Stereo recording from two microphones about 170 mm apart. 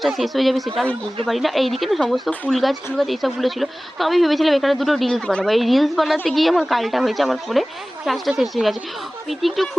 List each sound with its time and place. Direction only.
0.0 s speech: centre (ahead or behind)